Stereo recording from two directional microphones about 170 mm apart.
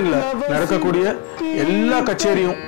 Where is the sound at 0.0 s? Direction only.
20° left (ahead or behind).